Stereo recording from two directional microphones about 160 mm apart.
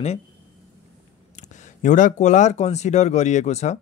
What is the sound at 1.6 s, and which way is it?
Speech, 50° left (ahead or behind).